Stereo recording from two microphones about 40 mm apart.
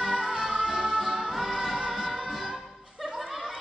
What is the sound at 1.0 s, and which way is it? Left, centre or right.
Music, centre.